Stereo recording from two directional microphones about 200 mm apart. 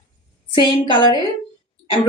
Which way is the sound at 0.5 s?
25° left (ahead or behind).